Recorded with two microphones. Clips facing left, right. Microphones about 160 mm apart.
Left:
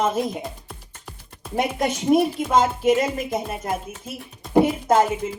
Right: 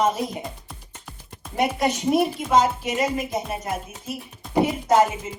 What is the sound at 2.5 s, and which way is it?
Speech, 50° left (ahead or behind).